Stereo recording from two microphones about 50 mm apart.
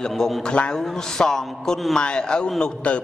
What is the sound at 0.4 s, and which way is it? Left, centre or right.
Mantra, centre.